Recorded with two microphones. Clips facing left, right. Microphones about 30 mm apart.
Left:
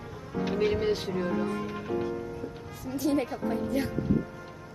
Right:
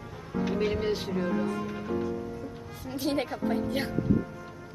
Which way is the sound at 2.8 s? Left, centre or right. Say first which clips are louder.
Left 2 dB; right.